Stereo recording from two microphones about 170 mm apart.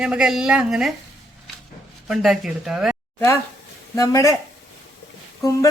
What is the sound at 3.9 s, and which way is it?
Speech, 20° left (ahead or behind).